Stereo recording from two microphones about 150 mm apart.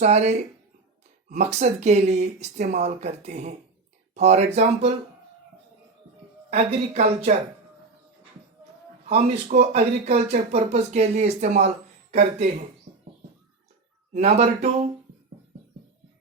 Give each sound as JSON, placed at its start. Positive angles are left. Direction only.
{"t": 0.0, "sound": "speech", "side_deg": -50}
{"t": 6.5, "sound": "speech", "side_deg": -45}
{"t": 9.0, "sound": "speech", "side_deg": -50}
{"t": 14.1, "sound": "speech", "side_deg": -45}